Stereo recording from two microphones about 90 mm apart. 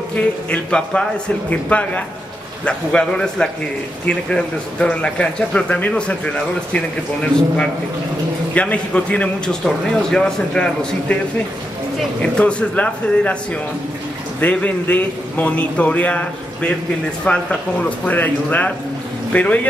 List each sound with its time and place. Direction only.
0.1 s speech: 15° left (ahead or behind)
8.5 s speech: 15° left (ahead or behind)
12.2 s speech: 10° left (ahead or behind)
14.4 s speech: 15° left (ahead or behind)